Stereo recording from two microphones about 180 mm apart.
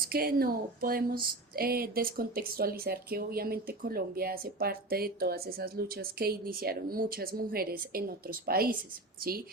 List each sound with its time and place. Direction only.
0.0 s speech: 55° right (ahead or behind)